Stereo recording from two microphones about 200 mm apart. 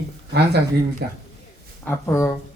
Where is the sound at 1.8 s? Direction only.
10° left (ahead or behind).